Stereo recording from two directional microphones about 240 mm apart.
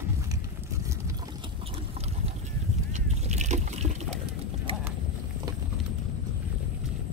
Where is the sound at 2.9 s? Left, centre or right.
Right.